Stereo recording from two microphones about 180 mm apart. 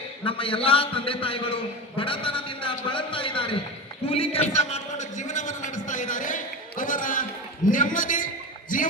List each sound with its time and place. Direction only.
0.3 s a man's voice: 30° left (ahead or behind); by 8.9 s 50° left (ahead or behind)